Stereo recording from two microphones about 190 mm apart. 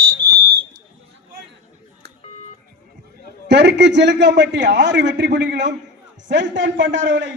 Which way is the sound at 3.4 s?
65° right (ahead or behind).